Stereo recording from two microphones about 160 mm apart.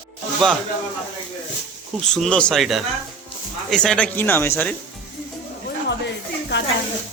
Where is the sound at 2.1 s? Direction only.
5° left (ahead or behind).